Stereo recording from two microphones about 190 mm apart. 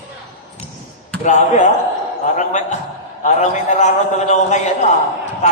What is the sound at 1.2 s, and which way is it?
A man's voice, 40° left (ahead or behind).